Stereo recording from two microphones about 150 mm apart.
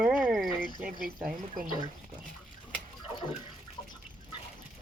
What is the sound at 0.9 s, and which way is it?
Speech, 70° right (ahead or behind).